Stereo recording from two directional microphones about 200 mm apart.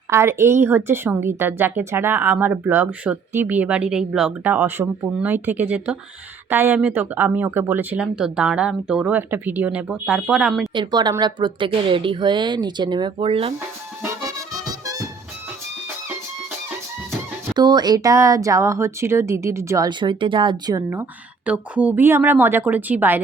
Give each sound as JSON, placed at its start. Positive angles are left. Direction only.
{"t": 0.1, "sound": "speech", "side_deg": -15}
{"t": 10.8, "sound": "speech", "side_deg": -20}
{"t": 14.6, "sound": "music", "side_deg": -20}
{"t": 17.1, "sound": "speech", "side_deg": -20}